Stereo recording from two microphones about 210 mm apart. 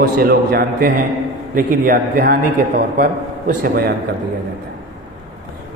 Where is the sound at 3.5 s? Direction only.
45° right (ahead or behind).